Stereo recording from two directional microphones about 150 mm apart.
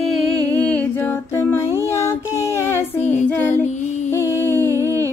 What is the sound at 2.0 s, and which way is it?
Child singing, 20° left (ahead or behind).